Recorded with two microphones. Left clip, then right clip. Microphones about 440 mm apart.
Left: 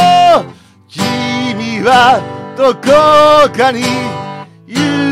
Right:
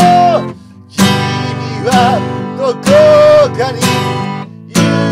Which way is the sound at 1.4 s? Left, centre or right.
Left.